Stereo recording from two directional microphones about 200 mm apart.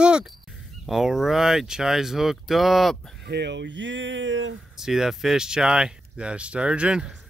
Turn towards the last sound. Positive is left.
turn(degrees=-5)  # may be behind; listen again after turning